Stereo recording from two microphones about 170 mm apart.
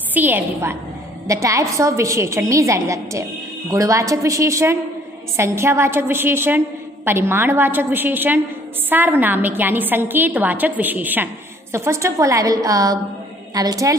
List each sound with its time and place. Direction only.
0.1 s a woman's voice: 10° right (ahead or behind)